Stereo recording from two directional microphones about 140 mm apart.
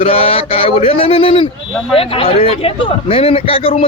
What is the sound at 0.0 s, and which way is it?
A man's voice, 45° left (ahead or behind).